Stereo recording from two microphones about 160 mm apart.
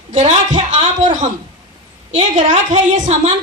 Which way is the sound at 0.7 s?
50° right (ahead or behind).